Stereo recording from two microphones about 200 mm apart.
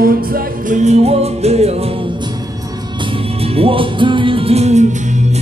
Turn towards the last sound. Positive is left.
turn(degrees=-30)  # may be behind; listen again after turning